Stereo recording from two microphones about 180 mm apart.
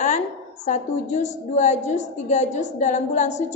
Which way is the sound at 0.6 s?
40° left (ahead or behind).